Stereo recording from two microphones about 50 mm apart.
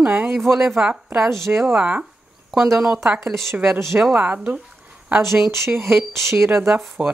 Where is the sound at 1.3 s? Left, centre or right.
Right.